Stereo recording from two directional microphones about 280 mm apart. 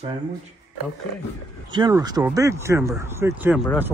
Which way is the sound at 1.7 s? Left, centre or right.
Centre.